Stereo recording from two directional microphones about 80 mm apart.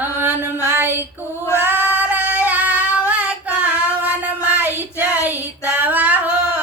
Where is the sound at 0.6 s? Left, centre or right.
Right.